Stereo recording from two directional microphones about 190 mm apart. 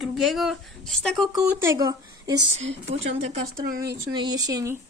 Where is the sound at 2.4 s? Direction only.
75° right (ahead or behind).